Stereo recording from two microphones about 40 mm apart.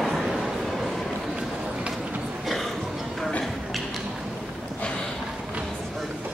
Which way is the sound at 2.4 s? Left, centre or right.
Centre.